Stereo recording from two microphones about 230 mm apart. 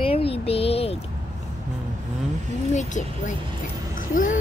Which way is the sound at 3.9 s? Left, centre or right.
Left.